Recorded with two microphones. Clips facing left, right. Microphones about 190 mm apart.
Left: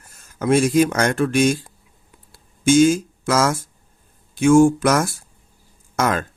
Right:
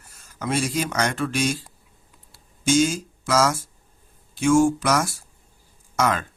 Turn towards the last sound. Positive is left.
turn(degrees=50)  # may be behind; listen again after turning